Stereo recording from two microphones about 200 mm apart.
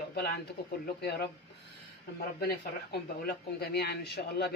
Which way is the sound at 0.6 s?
50° left (ahead or behind).